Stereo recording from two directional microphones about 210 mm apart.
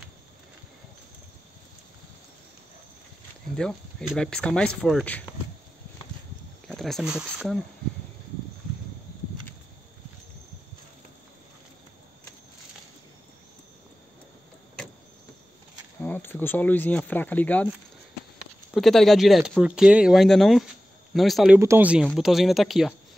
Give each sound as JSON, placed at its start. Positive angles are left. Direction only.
{"t": 3.5, "sound": "speech", "side_deg": 0}
{"t": 6.7, "sound": "speech", "side_deg": 0}
{"t": 16.0, "sound": "speech", "side_deg": 10}
{"t": 18.7, "sound": "speech", "side_deg": 0}
{"t": 21.5, "sound": "speech", "side_deg": -10}